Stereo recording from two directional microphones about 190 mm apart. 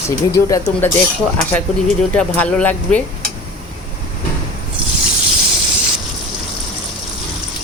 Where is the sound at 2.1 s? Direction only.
5° left (ahead or behind).